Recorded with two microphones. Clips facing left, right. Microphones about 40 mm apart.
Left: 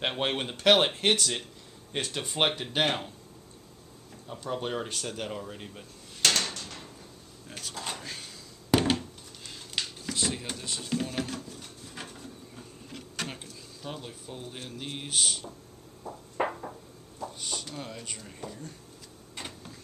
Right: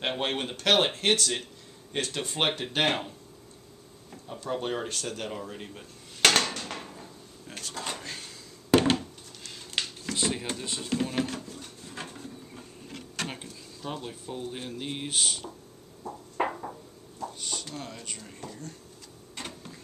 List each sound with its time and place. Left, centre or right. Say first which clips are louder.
0.2 s speech: left 1 dB; centre
2.8 s speech: right 2 dB; centre
4.4 s speech: right 1 dB; centre
6.2 s drawer open or close: right 4 dB; right
7.4 s drawer open or close: right 1 dB; centre
8.7 s a sound: right 3 dB; centre
10.1 s a sound: right 2 dB; centre
13.3 s speech: right 2 dB; centre
16.0 s a sound: right 1 dB; centre